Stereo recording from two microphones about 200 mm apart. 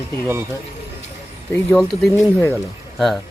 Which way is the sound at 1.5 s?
Centre (ahead or behind).